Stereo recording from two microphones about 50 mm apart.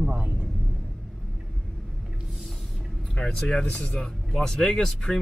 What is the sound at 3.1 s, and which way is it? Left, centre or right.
Speech, centre.